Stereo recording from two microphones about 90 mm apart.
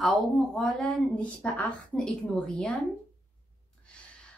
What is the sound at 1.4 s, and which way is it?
Speech, 15° left (ahead or behind).